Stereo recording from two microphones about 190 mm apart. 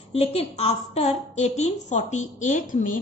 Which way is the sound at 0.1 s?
30° left (ahead or behind).